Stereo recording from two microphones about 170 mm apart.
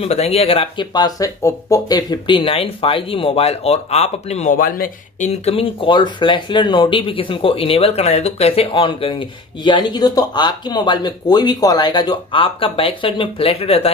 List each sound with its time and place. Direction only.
0.0 s speech: 35° left (ahead or behind)
4.6 s speech: 55° left (ahead or behind); by 13.9 s 35° left (ahead or behind)